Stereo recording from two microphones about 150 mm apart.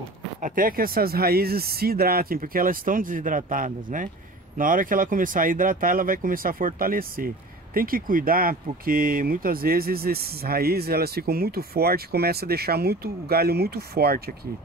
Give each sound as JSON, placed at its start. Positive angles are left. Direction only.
{"t": 0.4, "sound": "speech", "side_deg": -65}